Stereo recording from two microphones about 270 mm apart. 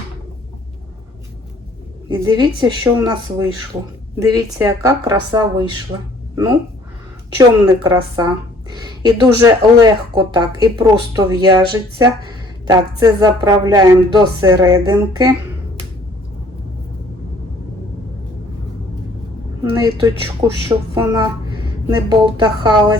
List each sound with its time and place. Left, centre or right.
2.0 s speech: centre
19.7 s speech: centre